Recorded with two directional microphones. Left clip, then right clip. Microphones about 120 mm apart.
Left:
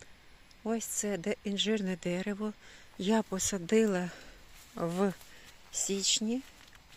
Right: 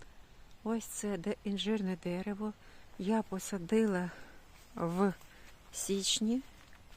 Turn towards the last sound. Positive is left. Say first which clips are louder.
# left 2 dB
turn(degrees=-20)  # may be behind; listen again after turning